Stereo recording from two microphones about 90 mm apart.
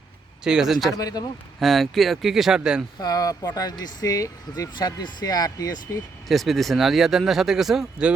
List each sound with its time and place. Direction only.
0.4 s speech: 5° right (ahead or behind)
0.9 s speech: 45° left (ahead or behind)
1.5 s speech: centre (ahead or behind)
3.0 s speech: 45° left (ahead or behind)
6.2 s speech: centre (ahead or behind)